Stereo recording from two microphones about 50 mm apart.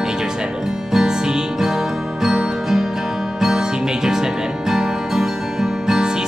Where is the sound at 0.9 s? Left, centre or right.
Centre.